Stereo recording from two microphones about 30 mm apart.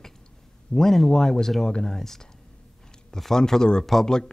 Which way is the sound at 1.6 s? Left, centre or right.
Left.